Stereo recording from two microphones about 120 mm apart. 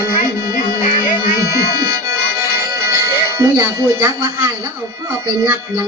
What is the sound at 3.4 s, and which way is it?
Speech, 25° right (ahead or behind).